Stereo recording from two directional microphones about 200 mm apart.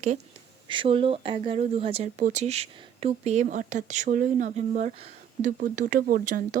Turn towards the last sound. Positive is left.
turn(degrees=-40)  # may be behind; listen again after turning